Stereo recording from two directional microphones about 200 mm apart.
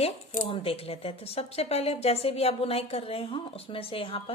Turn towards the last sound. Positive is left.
turn(degrees=30)  # may be behind; listen again after turning